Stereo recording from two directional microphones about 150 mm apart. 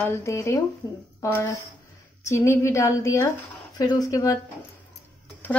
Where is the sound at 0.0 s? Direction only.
15° left (ahead or behind).